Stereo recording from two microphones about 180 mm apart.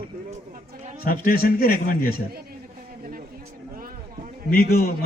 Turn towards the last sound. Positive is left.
turn(degrees=55)  # may be behind; listen again after turning